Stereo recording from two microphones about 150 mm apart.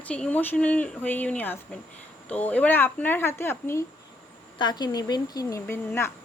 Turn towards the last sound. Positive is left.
turn(degrees=15)  # may be behind; listen again after turning